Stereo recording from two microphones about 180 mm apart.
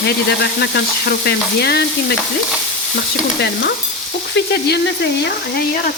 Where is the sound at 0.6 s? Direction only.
65° left (ahead or behind).